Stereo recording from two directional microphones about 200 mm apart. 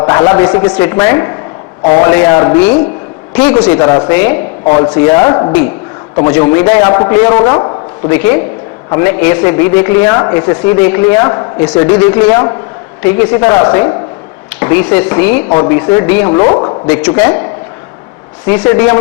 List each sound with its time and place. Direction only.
0.0 s a man's voice: 15° left (ahead or behind)
16.9 s a man's voice: 10° left (ahead or behind)
18.6 s a man's voice: 10° left (ahead or behind)